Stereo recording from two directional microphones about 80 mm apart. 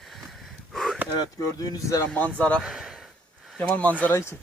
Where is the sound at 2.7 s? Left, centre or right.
Centre.